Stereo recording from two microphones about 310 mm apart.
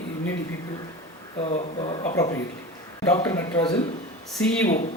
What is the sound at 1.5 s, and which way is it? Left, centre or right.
Speech, centre.